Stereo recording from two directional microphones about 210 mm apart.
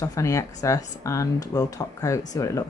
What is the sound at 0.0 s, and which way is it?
Speech, 15° left (ahead or behind).